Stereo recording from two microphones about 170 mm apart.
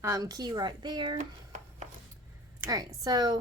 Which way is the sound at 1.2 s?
40° right (ahead or behind).